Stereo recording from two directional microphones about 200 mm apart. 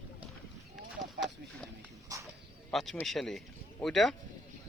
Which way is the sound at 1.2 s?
60° right (ahead or behind).